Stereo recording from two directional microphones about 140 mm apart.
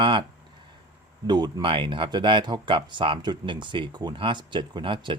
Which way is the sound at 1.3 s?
30° right (ahead or behind).